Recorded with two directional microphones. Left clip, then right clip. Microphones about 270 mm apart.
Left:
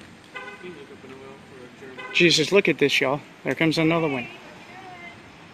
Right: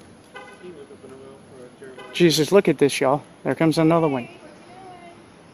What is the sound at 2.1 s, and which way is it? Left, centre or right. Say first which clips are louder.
Speech: right 1 dB; centre.